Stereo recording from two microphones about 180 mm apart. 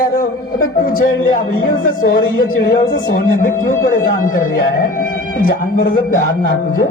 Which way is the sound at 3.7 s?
50° left (ahead or behind).